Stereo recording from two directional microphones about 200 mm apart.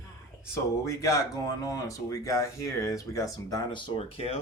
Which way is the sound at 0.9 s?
15° left (ahead or behind).